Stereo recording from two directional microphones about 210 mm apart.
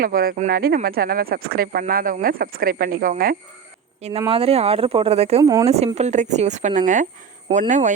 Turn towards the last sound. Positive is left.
turn(degrees=-35)  # may be behind; listen again after turning